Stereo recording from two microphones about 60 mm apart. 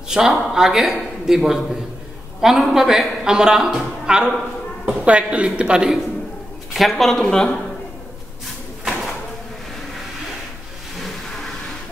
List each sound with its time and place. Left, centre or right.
0.1 s a woman's voice: centre
6.7 s speech: centre